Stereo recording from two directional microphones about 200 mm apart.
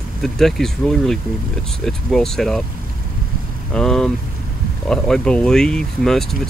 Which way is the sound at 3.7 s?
5° left (ahead or behind).